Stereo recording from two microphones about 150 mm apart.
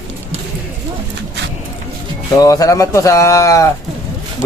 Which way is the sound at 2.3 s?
25° left (ahead or behind).